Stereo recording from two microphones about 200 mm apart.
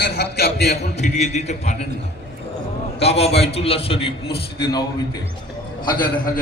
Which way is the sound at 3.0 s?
30° left (ahead or behind).